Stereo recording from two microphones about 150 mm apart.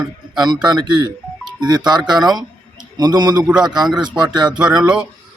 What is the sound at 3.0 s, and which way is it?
Speech, 25° right (ahead or behind).